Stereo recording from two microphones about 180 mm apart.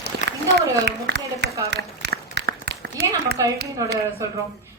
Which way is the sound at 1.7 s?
70° right (ahead or behind).